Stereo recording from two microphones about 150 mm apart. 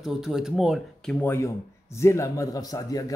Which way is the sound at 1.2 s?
15° left (ahead or behind).